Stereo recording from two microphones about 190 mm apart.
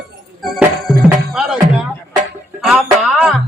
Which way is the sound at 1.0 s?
5° right (ahead or behind).